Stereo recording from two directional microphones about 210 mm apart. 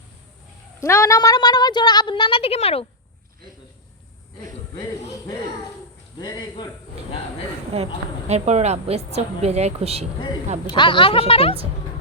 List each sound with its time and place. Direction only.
0.8 s speech: 15° left (ahead or behind)
6.1 s speech: 20° left (ahead or behind)
8.3 s a woman's voice: 30° right (ahead or behind)
10.7 s speech: 20° left (ahead or behind)